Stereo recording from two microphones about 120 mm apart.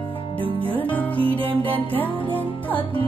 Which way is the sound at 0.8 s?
15° left (ahead or behind).